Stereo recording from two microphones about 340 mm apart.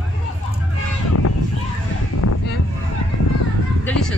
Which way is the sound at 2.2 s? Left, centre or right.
Left.